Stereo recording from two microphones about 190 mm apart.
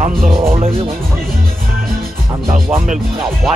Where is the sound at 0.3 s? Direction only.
30° right (ahead or behind).